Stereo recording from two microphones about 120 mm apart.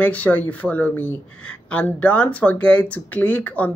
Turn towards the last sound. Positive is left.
turn(degrees=10)  # may be behind; listen again after turning